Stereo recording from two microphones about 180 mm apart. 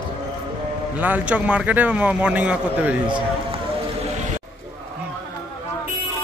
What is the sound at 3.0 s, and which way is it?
Run, 25° right (ahead or behind).